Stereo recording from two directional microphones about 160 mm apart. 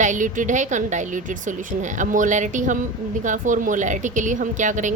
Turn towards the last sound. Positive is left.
turn(degrees=-50)  # may be behind; listen again after turning